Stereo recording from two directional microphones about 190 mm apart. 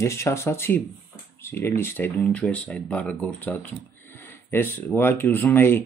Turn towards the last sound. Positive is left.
turn(degrees=10)  # may be behind; listen again after turning